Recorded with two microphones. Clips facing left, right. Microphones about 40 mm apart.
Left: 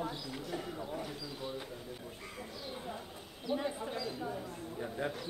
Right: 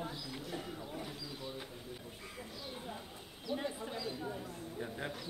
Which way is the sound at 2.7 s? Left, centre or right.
Centre.